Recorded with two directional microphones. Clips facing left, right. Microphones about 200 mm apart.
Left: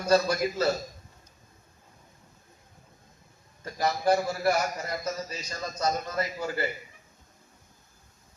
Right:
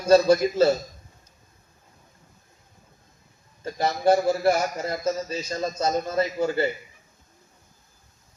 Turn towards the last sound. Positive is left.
turn(degrees=-25)  # may be behind; listen again after turning